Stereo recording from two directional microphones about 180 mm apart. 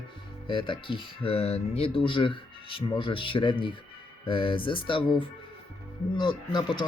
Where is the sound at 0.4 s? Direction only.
25° left (ahead or behind).